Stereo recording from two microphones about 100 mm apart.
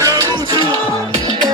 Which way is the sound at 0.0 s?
40° right (ahead or behind).